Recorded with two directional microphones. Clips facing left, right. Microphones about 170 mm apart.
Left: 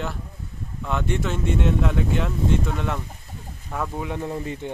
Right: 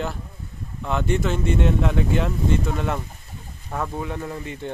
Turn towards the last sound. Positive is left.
turn(degrees=20)  # may be behind; listen again after turning